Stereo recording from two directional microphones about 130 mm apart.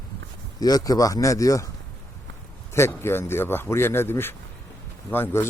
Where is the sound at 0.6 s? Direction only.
30° left (ahead or behind).